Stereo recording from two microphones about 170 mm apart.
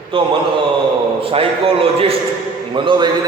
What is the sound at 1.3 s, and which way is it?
A man's voice, 35° right (ahead or behind).